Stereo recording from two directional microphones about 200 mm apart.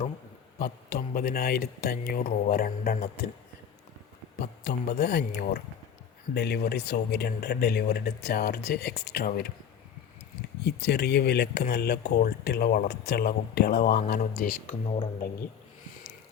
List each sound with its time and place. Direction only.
0.6 s speech: 50° left (ahead or behind)
4.4 s speech: 55° left (ahead or behind)
10.6 s speech: 55° left (ahead or behind)
14.2 s speech: 40° left (ahead or behind)